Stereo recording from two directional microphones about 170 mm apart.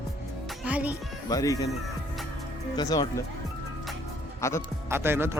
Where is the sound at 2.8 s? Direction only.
20° left (ahead or behind).